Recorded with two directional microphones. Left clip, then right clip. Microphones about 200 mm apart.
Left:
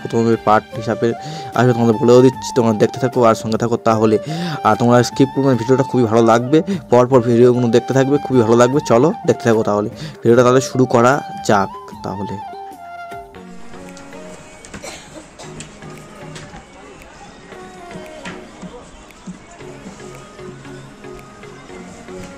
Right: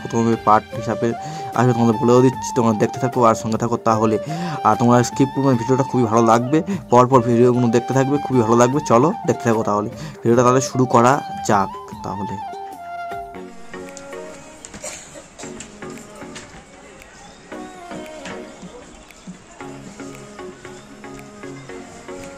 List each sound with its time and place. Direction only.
0.1 s speech: 15° left (ahead or behind)
5.3 s speech: centre (ahead or behind)
5.6 s speech: 15° left (ahead or behind)
12.4 s music: centre (ahead or behind)